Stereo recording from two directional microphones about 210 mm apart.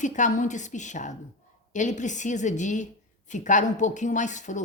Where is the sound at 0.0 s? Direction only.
35° left (ahead or behind).